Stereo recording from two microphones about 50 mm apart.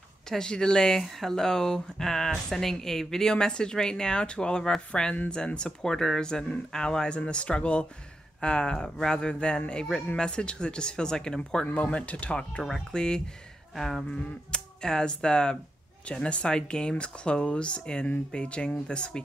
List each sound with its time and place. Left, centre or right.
0.3 s speech: centre
11.6 s speech: left
12.6 s speech: centre
13.7 s speech: centre
14.1 s speech: centre